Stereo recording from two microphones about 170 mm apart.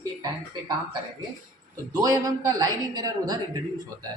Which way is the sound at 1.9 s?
20° right (ahead or behind).